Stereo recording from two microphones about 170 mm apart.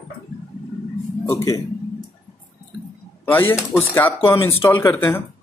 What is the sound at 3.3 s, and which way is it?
Speech, 10° left (ahead or behind).